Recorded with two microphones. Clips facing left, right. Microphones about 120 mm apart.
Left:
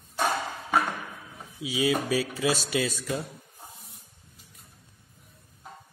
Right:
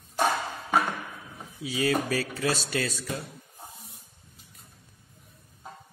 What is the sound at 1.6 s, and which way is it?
Speech, 15° left (ahead or behind).